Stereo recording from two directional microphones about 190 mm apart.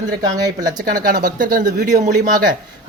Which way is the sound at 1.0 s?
45° right (ahead or behind).